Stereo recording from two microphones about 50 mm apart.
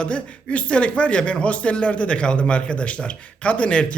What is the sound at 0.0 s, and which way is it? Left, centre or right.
Speech, left.